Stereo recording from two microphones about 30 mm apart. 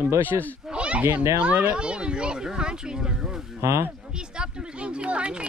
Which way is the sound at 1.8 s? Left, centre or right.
Right.